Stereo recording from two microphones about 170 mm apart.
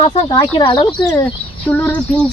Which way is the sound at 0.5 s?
30° left (ahead or behind).